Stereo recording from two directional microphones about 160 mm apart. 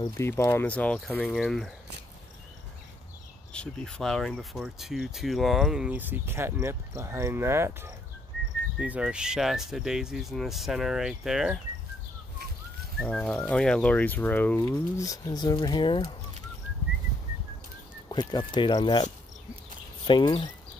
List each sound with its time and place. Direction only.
0.2 s speech: 15° left (ahead or behind)
3.5 s speech: 5° left (ahead or behind)
13.0 s speech: 5° left (ahead or behind)
14.6 s speech: 20° left (ahead or behind)
18.0 s speech: 25° left (ahead or behind)
20.1 s speech: 30° left (ahead or behind)